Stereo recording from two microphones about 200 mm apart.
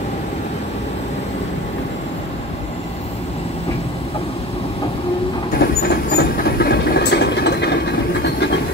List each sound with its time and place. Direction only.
5.6 s vehicle: 50° left (ahead or behind)